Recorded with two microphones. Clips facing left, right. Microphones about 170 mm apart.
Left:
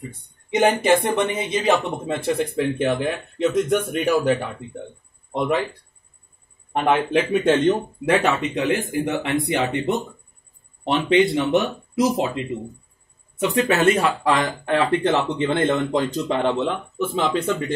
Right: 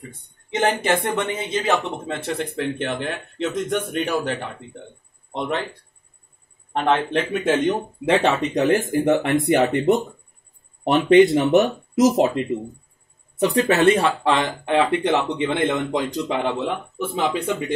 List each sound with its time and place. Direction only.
0.5 s speech: 15° left (ahead or behind)
6.7 s speech: 10° left (ahead or behind)
7.4 s speech: 10° right (ahead or behind)
8.0 s speech: 30° right (ahead or behind); by 12.3 s 45° right (ahead or behind)
13.4 s speech: 35° right (ahead or behind); by 17.7 s 15° right (ahead or behind)